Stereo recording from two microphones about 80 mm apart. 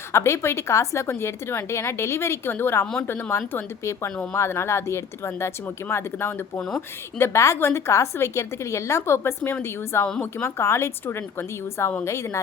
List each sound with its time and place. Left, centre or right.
0.1 s a woman's voice: left
6.6 s a woman's voice: centre
7.2 s a woman's voice: left